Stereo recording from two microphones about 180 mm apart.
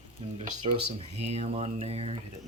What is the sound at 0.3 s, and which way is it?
Speech, 30° right (ahead or behind).